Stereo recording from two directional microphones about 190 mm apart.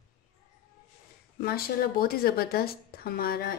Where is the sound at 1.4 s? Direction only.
50° left (ahead or behind).